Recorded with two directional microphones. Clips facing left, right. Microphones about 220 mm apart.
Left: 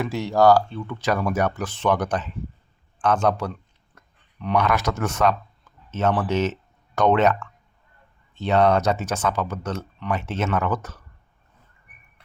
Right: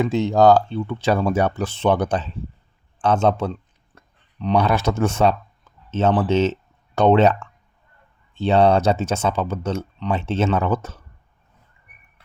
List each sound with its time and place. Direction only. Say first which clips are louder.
0.0 s speech: right 3 dB; 20° right (ahead or behind)
8.4 s speech: right 3 dB; 30° right (ahead or behind)